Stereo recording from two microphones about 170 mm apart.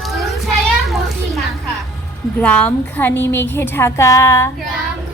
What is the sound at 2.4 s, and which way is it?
A woman's voice, 10° left (ahead or behind).